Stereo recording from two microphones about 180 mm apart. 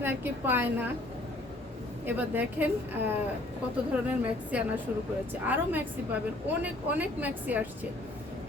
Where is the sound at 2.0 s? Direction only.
10° right (ahead or behind).